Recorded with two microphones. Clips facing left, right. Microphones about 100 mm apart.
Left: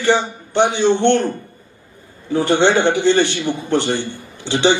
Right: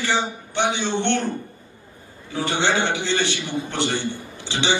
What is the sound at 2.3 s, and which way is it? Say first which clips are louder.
A man's voice: left 8 dB; 55° left (ahead or behind).